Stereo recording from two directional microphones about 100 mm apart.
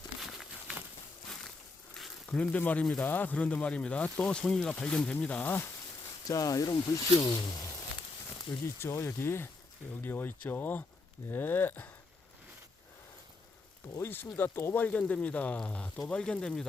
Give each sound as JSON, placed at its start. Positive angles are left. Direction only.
{"t": 0.2, "sound": "crumpling", "side_deg": 0}
{"t": 1.9, "sound": "a sound", "side_deg": 10}
{"t": 3.0, "sound": "speech", "side_deg": 20}
{"t": 6.2, "sound": "speech", "side_deg": 35}
{"t": 8.6, "sound": "speech", "side_deg": 25}
{"t": 13.8, "sound": "speech", "side_deg": 30}